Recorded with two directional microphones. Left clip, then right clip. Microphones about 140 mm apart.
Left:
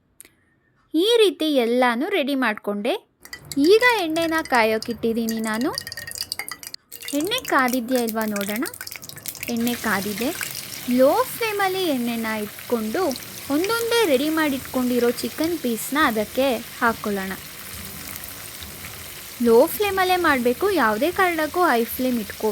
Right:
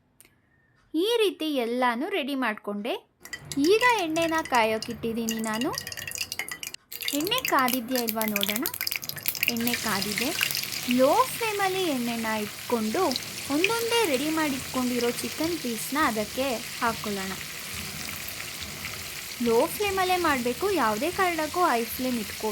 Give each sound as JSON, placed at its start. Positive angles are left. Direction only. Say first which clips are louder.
{"t": 0.9, "sound": "frying", "louder": "left 7 dB", "side_deg": 35}
{"t": 7.2, "sound": "frying", "louder": "left 4 dB", "side_deg": 20}
{"t": 9.6, "sound": "frying", "louder": "left 4 dB", "side_deg": 25}
{"t": 12.6, "sound": "frying", "louder": "left 3 dB", "side_deg": 5}
{"t": 13.5, "sound": "frying", "louder": "left 4 dB", "side_deg": 20}
{"t": 19.5, "sound": "frying", "louder": "left 7 dB", "side_deg": 30}